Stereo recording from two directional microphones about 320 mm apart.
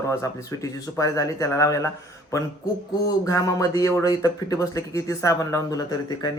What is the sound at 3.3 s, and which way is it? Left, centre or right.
A man's voice, centre.